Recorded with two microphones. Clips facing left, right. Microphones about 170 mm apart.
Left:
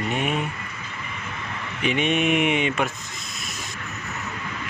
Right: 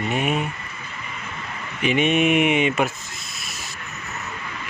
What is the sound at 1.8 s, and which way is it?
Speech, 5° right (ahead or behind).